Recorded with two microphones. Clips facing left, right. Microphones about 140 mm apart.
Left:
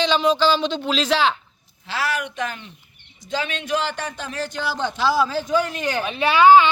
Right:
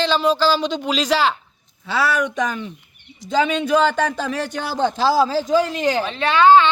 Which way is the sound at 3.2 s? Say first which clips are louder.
Right 8 dB; 90° right.